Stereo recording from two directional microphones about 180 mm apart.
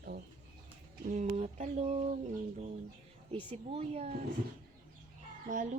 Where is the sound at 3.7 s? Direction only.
35° right (ahead or behind).